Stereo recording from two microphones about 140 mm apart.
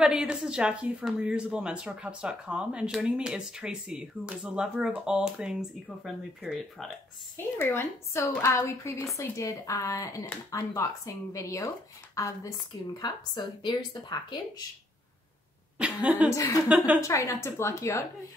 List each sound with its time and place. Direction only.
0.0 s speech: 5° right (ahead or behind)
7.3 s a woman's voice: 15° left (ahead or behind)
15.8 s speech: 10° right (ahead or behind)
16.3 s a woman's voice: 25° left (ahead or behind)
16.6 s speech: 10° right (ahead or behind)
17.0 s a woman's voice: 20° left (ahead or behind)